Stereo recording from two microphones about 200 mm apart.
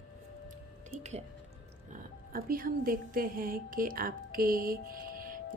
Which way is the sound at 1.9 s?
45° right (ahead or behind).